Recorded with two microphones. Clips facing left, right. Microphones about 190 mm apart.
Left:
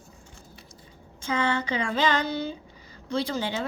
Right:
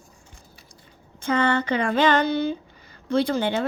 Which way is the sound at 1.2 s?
60° right (ahead or behind).